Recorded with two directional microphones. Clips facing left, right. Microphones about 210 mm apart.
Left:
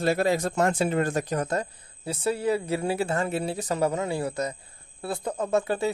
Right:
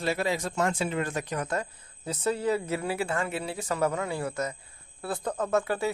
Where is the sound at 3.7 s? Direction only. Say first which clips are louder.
Left 2 dB; 25° left (ahead or behind).